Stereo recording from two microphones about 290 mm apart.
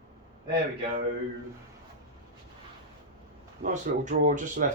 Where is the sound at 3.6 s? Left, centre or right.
Right.